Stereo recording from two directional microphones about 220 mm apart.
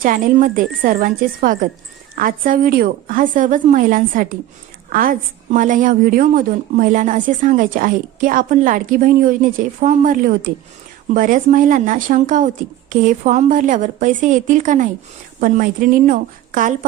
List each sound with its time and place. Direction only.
0.0 s a woman's voice: 40° right (ahead or behind)